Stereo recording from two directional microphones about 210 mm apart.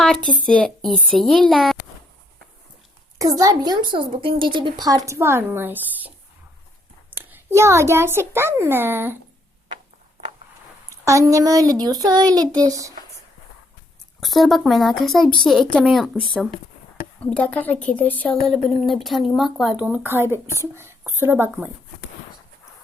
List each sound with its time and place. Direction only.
0.0 s speech: 5° left (ahead or behind)
3.2 s a woman's voice: 15° right (ahead or behind)
10.8 s a woman's voice: 15° right (ahead or behind)
14.2 s a woman's voice: centre (ahead or behind)